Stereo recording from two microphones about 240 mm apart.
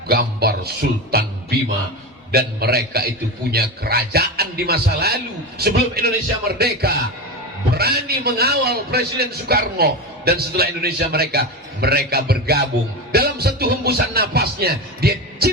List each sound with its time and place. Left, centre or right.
0.1 s a man's voice: right